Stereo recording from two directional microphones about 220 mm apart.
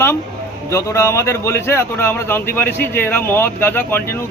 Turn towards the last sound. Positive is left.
turn(degrees=10)  # may be behind; listen again after turning